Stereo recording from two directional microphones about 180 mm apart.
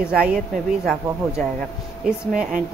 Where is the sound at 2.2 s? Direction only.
5° right (ahead or behind).